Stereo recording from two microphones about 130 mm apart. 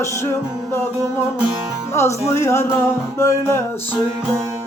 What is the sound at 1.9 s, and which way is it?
Music, 20° left (ahead or behind).